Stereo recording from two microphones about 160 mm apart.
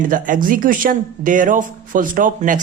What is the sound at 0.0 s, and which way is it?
Speech, 55° right (ahead or behind).